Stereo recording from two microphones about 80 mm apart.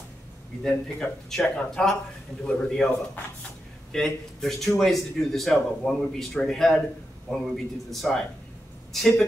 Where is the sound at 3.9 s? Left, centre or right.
Centre.